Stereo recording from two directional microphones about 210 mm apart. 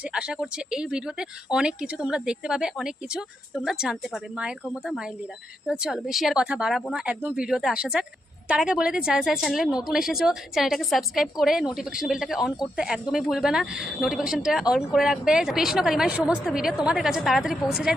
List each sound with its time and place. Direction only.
0.1 s a woman's voice: 5° right (ahead or behind)